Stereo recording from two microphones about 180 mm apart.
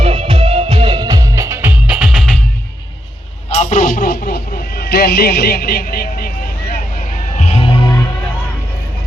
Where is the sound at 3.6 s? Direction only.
50° left (ahead or behind).